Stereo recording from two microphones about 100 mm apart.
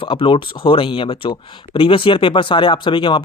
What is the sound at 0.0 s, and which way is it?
Speech, 60° left (ahead or behind).